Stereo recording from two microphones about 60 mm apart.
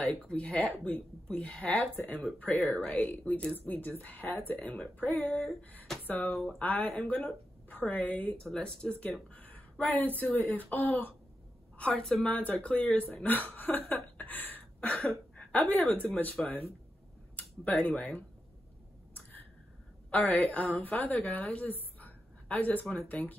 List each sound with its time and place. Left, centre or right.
0.0 s speech: centre
8.5 s speech: centre
9.0 s speech: left
11.9 s speech: centre
12.3 s speech: left
16.4 s speech: centre
17.4 s speech: left
20.1 s a woman's voice: left